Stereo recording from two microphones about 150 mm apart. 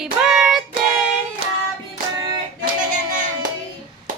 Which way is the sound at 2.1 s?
30° right (ahead or behind).